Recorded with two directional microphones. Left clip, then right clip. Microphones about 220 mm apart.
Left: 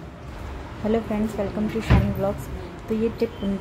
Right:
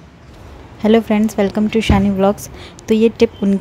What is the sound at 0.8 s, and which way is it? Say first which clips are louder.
Speech: right 11 dB; 50° right (ahead or behind).